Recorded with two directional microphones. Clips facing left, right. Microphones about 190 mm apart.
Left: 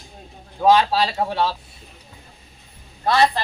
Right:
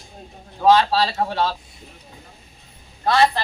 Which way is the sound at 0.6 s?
15° left (ahead or behind).